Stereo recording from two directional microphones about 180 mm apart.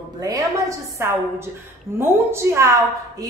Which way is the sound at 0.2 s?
20° right (ahead or behind).